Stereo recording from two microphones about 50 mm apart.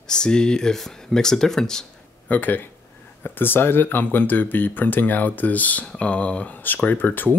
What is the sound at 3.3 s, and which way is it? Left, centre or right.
Speech, left.